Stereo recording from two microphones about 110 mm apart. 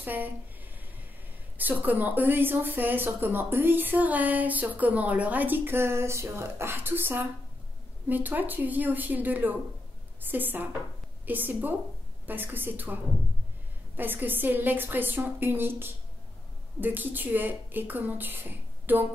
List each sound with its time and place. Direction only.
0.0 s speech: 15° right (ahead or behind)
1.6 s speech: 15° right (ahead or behind)